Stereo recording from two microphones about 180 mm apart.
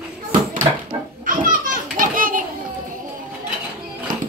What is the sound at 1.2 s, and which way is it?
Children playing, 50° right (ahead or behind).